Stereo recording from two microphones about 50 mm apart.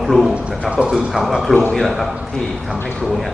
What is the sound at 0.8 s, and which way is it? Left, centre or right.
Speech, centre.